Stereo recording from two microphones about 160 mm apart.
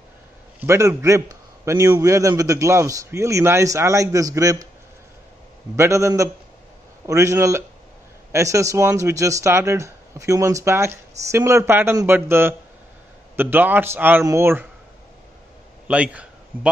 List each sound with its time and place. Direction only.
0.6 s a man's voice: 20° right (ahead or behind)
5.8 s a man's voice: 20° right (ahead or behind)
15.9 s a man's voice: 10° right (ahead or behind)